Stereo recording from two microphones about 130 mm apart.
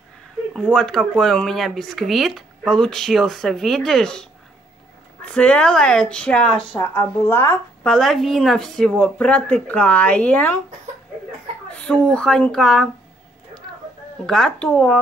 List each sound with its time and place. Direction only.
0.5 s speech: 5° right (ahead or behind); by 7.5 s 20° left (ahead or behind)
7.8 s speech: 5° left (ahead or behind)
11.7 s speech: 10° left (ahead or behind)
14.2 s speech: 5° left (ahead or behind)